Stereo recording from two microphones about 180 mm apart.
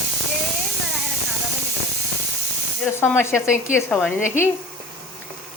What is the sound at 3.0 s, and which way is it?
Speech, 15° left (ahead or behind).